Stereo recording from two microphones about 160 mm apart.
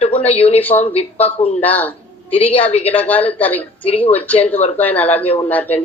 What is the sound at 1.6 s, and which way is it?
Speech, 10° left (ahead or behind).